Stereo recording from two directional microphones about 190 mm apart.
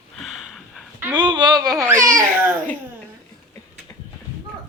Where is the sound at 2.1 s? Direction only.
10° right (ahead or behind).